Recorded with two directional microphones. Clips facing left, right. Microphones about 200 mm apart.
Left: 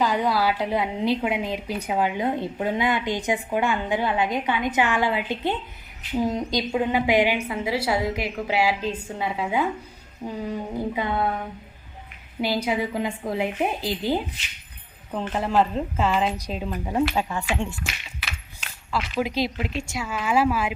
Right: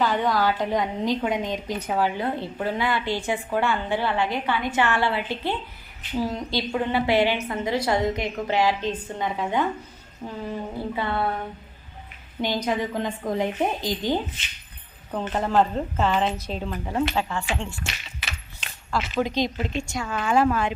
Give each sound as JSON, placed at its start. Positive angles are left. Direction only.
{"t": 0.0, "sound": "a woman's voice", "side_deg": 10}
{"t": 12.4, "sound": "a woman's voice", "side_deg": 10}
{"t": 17.2, "sound": "a woman's voice", "side_deg": 15}
{"t": 17.8, "sound": "speech", "side_deg": 5}